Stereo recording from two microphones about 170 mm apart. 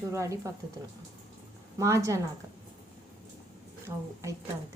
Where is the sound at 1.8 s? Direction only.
15° right (ahead or behind).